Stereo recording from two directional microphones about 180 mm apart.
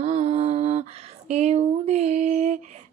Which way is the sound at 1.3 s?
35° right (ahead or behind).